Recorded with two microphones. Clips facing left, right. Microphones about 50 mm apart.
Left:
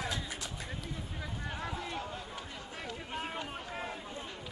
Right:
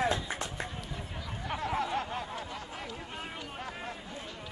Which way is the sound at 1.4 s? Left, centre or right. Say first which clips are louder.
Right 9 dB; right.